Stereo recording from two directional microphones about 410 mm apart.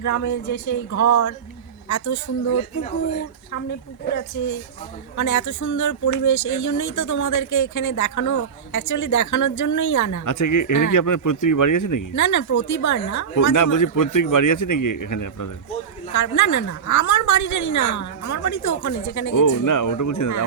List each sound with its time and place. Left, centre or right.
0.0 s speech: left
5.1 s speech: left